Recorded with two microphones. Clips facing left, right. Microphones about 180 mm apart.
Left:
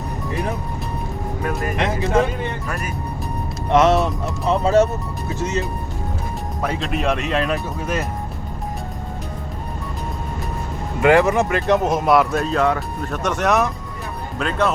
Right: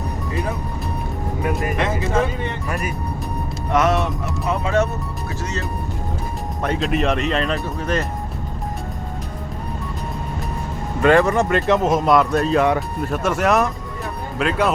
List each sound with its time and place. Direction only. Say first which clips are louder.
3.7 s speech: left 3 dB; 25° left (ahead or behind)
5.4 s speech: left 6 dB; 20° left (ahead or behind)
6.6 s speech: right 3 dB; centre (ahead or behind)
11.0 s speech: even; 15° left (ahead or behind)
12.5 s speech: right 2 dB; 15° right (ahead or behind)